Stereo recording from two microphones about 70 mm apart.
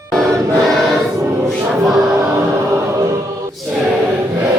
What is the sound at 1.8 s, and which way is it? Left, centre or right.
Music, centre.